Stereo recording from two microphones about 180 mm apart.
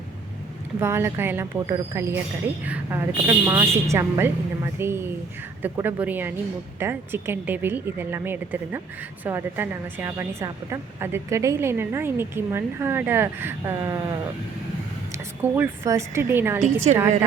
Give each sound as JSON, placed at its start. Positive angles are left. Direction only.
{"t": 0.8, "sound": "a woman's voice", "side_deg": -15}
{"t": 16.9, "sound": "a woman's voice", "side_deg": -35}